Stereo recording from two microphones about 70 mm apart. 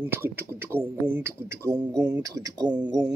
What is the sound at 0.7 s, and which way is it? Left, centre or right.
Speech, right.